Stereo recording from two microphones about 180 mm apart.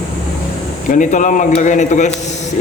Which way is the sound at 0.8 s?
45° left (ahead or behind).